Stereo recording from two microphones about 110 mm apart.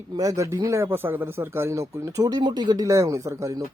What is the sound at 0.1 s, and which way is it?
Speech, 30° right (ahead or behind).